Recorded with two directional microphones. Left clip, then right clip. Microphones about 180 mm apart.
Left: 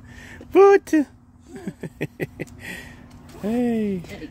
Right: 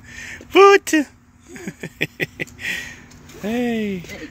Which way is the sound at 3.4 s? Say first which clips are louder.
Right 1 dB; 15° left (ahead or behind).